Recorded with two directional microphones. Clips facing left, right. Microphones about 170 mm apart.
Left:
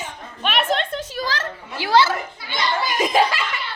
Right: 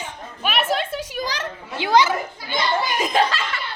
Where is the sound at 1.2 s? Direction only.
15° right (ahead or behind).